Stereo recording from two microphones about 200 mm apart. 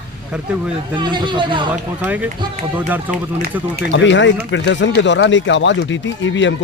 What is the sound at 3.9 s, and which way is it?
Speech, 65° left (ahead or behind).